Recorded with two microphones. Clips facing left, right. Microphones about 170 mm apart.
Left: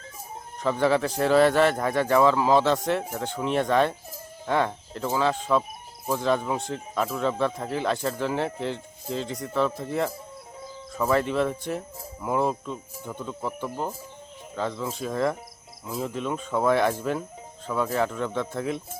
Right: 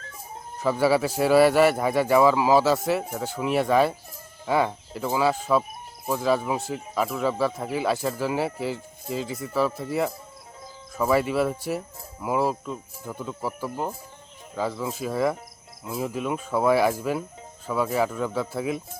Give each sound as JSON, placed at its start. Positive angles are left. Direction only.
{"t": 0.6, "sound": "speech", "side_deg": -5}